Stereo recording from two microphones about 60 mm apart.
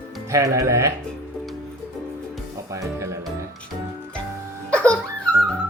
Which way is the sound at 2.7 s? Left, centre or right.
Right.